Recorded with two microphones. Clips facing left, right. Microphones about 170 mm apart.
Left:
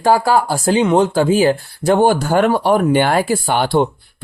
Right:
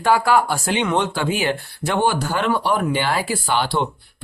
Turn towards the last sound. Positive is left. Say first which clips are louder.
# left 6 dB
turn(degrees=50)  # may be behind; listen again after turning